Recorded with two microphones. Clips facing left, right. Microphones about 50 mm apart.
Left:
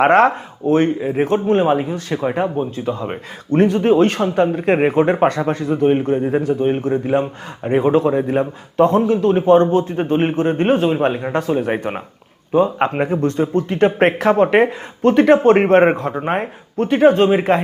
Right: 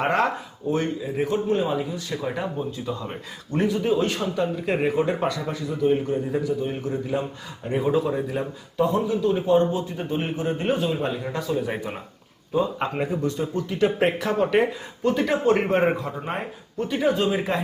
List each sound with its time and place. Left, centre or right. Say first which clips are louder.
0.0 s a man's voice: left 10 dB; left